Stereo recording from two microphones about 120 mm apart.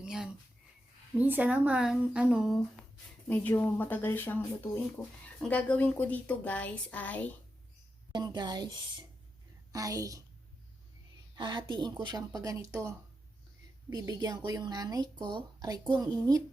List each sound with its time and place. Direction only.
0.0 s speech: 5° right (ahead or behind)
3.2 s a woman's voice: 15° left (ahead or behind)
8.1 s a woman's voice: 35° right (ahead or behind)
11.3 s a woman's voice: 40° right (ahead or behind)